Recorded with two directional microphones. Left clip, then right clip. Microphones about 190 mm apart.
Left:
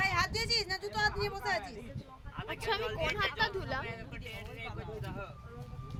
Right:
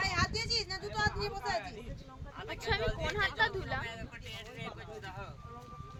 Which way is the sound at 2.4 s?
15° left (ahead or behind).